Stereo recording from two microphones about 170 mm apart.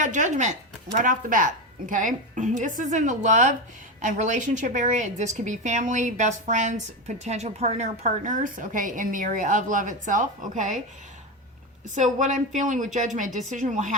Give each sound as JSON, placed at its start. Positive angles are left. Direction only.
{"t": 0.0, "sound": "a woman's voice", "side_deg": -45}
{"t": 12.5, "sound": "a woman's voice", "side_deg": -45}